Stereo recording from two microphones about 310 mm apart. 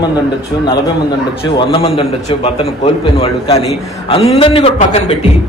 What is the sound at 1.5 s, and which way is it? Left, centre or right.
A man's voice, centre.